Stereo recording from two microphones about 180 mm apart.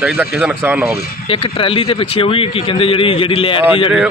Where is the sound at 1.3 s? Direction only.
30° left (ahead or behind).